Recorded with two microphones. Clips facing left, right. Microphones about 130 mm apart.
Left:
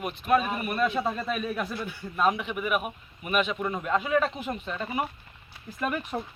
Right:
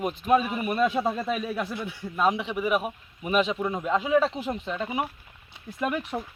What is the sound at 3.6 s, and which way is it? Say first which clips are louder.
Speech: right 2 dB; 10° right (ahead or behind).